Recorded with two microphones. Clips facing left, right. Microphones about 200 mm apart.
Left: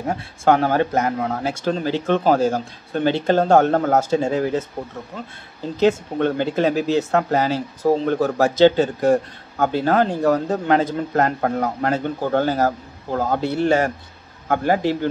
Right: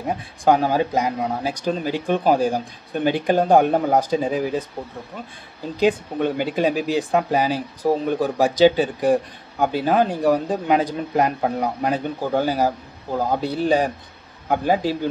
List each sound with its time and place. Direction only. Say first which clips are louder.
0.0 s speech: left 1 dB; 15° right (ahead or behind)
5.8 s speech: left 2 dB; 15° right (ahead or behind)